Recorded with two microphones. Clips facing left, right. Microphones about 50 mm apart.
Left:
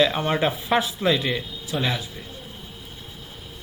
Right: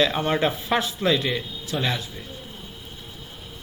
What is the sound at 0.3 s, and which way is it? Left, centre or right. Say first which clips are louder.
A man's voice: even; centre.